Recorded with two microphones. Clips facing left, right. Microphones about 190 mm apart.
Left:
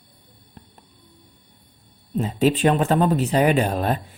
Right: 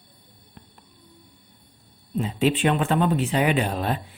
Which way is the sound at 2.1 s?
40° left (ahead or behind).